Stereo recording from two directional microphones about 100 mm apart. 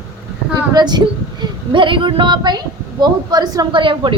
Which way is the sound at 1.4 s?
55° right (ahead or behind).